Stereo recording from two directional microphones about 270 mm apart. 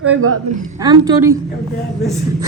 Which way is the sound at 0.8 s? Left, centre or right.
Centre.